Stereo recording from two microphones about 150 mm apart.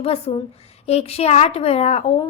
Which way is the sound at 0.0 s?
40° left (ahead or behind).